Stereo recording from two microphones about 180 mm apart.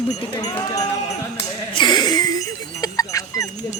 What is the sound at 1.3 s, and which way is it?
Music, 25° left (ahead or behind).